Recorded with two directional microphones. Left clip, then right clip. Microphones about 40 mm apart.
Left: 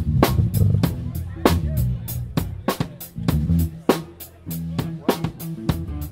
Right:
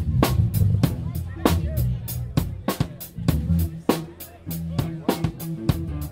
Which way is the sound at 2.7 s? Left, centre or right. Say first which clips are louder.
Left 4 dB; left.